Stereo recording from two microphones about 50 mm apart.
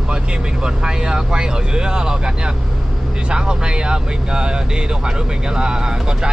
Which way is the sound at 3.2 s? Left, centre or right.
Centre.